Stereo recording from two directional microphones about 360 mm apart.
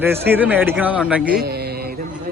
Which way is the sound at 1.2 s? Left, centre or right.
Right.